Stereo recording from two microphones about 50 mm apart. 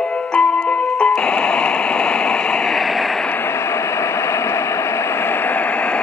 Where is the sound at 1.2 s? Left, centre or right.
Centre.